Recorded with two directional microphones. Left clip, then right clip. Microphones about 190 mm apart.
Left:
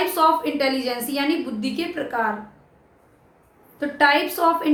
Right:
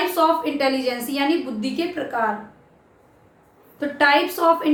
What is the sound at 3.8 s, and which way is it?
Speech, 10° left (ahead or behind).